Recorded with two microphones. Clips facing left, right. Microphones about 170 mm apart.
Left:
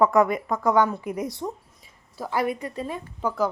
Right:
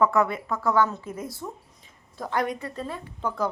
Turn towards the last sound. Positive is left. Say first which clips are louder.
# left 3 dB
turn(degrees=5)  # may be behind; listen again after turning